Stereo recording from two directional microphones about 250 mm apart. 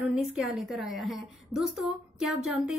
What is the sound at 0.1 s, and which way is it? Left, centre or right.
A woman's voice, centre.